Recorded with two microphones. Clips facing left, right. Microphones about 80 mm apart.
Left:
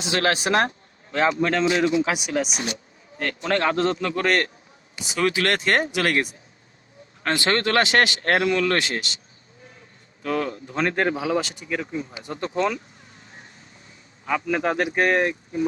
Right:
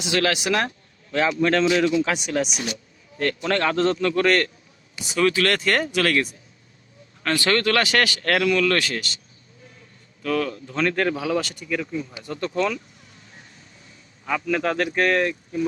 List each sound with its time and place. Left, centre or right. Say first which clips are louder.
0.0 s speech: even; left
2.1 s speech: right 1 dB; centre
3.2 s speech: right 1 dB; left
10.2 s speech: right 1 dB; left
14.3 s speech: even; centre